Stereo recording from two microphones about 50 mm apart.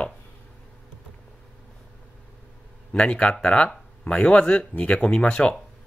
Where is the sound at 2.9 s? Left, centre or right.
Centre.